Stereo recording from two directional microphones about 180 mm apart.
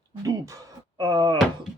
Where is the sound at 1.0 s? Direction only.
25° right (ahead or behind).